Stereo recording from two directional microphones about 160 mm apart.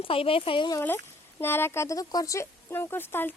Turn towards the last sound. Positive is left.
turn(degrees=15)  # may be behind; listen again after turning